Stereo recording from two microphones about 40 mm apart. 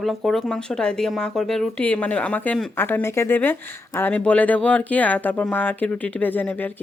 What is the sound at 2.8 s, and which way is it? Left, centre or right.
Speech, left.